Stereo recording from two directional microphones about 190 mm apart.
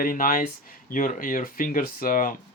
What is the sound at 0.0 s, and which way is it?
Speech, 50° left (ahead or behind).